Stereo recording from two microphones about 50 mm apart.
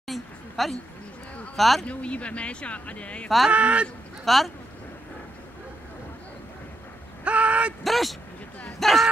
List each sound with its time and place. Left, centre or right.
0.0 s a sound: centre
1.6 s speech: centre
1.9 s speech: left
3.5 s speech: right
4.2 s speech: centre
7.2 s a sound: right
7.8 s speech: centre